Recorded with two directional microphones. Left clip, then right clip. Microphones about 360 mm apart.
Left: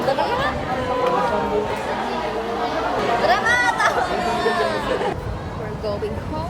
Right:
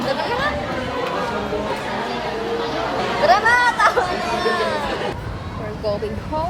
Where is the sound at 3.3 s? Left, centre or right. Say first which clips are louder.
Right 6 dB; centre.